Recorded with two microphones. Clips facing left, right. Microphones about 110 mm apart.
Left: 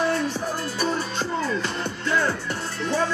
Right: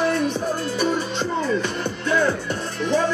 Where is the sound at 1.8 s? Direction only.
20° right (ahead or behind).